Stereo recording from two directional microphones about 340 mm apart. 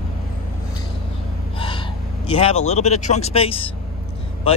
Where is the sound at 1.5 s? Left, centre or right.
Centre.